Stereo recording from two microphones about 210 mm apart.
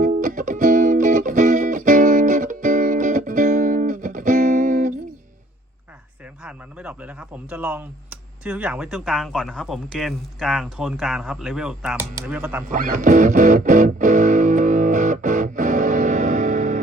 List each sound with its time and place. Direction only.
0.0 s music: 40° right (ahead or behind)
6.4 s speech: 5° right (ahead or behind)
12.6 s music: 40° right (ahead or behind)